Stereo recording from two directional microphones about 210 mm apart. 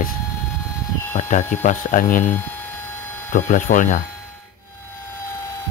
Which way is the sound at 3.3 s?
40° left (ahead or behind).